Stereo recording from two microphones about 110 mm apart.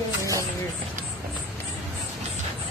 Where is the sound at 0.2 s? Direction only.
30° right (ahead or behind).